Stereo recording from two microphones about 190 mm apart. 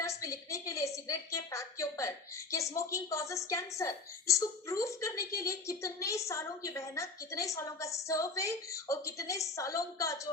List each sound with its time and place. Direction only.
0.0 s a woman's voice: 15° left (ahead or behind)